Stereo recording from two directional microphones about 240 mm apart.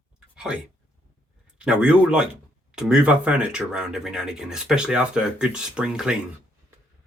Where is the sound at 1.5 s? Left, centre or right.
Centre.